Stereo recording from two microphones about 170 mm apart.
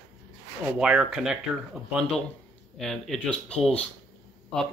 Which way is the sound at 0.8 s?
5° right (ahead or behind).